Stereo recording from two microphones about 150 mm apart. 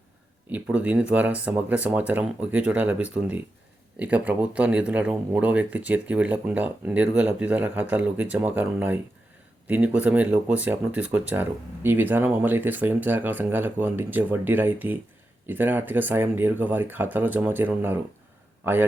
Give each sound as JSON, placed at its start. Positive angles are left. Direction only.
{"t": 0.5, "sound": "a man's voice", "side_deg": -10}